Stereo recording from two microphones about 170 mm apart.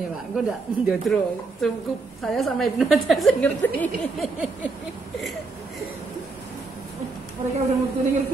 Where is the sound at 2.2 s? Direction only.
Centre (ahead or behind).